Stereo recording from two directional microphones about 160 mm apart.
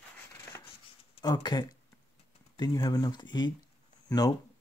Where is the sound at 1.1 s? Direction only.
25° left (ahead or behind).